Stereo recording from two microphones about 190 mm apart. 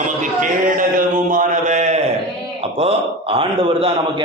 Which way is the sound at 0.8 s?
45° right (ahead or behind).